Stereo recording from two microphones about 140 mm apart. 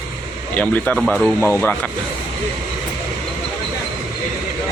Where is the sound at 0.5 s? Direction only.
10° left (ahead or behind).